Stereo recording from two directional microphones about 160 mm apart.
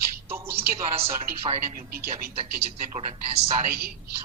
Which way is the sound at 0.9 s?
40° right (ahead or behind).